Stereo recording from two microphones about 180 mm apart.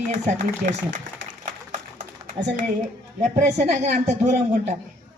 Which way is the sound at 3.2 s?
40° right (ahead or behind).